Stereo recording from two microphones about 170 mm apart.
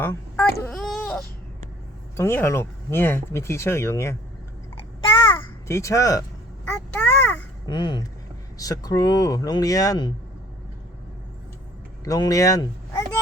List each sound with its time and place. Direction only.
0.0 s baby cry: 10° left (ahead or behind)
0.7 s baby cry: centre (ahead or behind)
2.1 s speech: 15° left (ahead or behind)
4.9 s a sound: 30° left (ahead or behind)
5.6 s speech: 15° left (ahead or behind)
6.9 s a sound: 5° left (ahead or behind)
7.7 s speech: 25° left (ahead or behind)
12.0 s speech: 20° left (ahead or behind)